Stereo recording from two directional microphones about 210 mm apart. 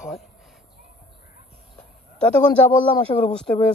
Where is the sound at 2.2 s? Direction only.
5° left (ahead or behind).